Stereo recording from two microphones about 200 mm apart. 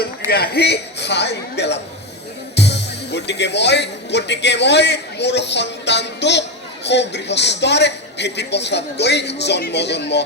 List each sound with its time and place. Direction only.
0.0 s a man's voice: 50° left (ahead or behind)